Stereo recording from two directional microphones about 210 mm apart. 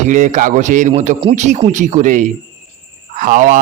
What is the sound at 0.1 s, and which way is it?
A man's voice, 35° right (ahead or behind).